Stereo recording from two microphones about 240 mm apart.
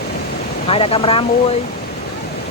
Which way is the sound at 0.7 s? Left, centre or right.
Left.